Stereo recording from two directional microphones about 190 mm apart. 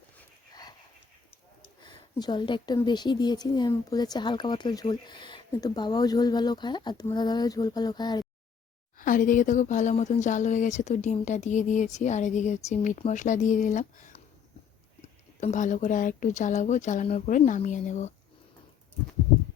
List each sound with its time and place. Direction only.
1.8 s speech: 20° left (ahead or behind)
9.0 s speech: 45° left (ahead or behind)
15.0 s speech: 40° left (ahead or behind)